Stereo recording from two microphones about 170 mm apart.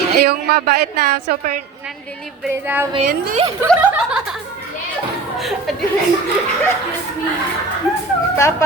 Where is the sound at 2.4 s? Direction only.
10° right (ahead or behind).